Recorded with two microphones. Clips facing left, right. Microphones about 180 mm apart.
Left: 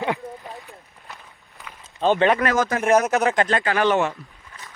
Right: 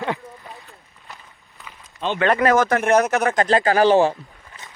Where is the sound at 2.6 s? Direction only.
65° right (ahead or behind).